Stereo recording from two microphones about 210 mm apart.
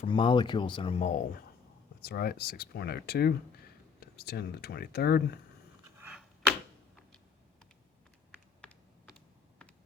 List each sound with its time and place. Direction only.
0.0 s speech: 25° left (ahead or behind)
2.0 s speech: 50° left (ahead or behind)
6.0 s a sound: 5° right (ahead or behind)
8.3 s computer keyboard: 5° left (ahead or behind)